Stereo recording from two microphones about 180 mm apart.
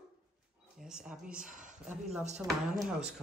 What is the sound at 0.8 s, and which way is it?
Speech, 5° right (ahead or behind).